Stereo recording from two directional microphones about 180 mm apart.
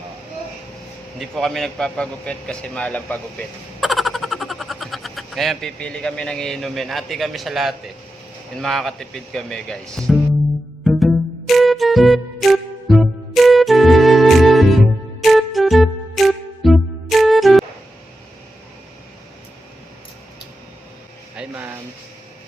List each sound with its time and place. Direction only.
1.2 s a man's voice: centre (ahead or behind)
10.8 s music: centre (ahead or behind)
21.3 s a sound: 10° right (ahead or behind)